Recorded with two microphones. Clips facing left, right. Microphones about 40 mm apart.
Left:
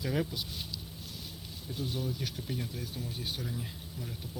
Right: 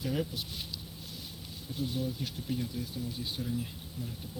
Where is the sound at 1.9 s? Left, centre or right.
Left.